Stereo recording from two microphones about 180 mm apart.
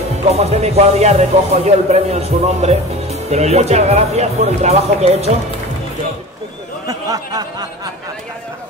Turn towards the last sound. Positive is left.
turn(degrees=-20)  # may be behind; listen again after turning